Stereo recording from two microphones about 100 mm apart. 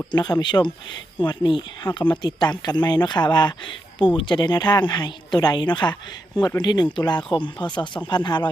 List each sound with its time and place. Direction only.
0.1 s speech: 45° left (ahead or behind)